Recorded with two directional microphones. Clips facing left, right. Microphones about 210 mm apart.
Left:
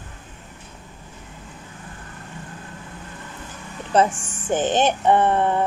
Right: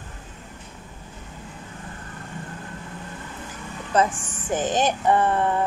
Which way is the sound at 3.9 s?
30° left (ahead or behind).